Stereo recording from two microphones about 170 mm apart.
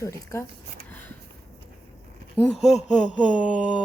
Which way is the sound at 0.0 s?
15° left (ahead or behind).